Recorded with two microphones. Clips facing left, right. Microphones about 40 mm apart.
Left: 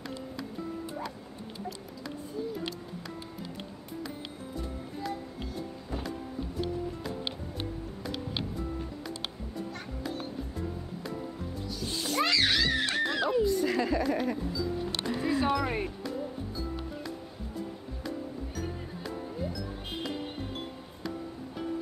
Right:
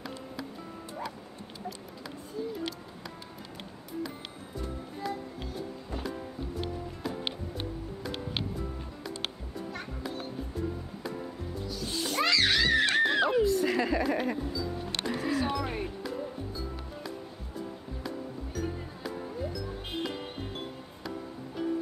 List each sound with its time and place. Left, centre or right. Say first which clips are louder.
5.0 s music: right 2 dB; centre
11.6 s music: right 1 dB; centre
12.7 s music: right 4 dB; right
13.4 s a sound: right 1 dB; centre
14.5 s music: left 2 dB; centre
18.0 s music: left 2 dB; centre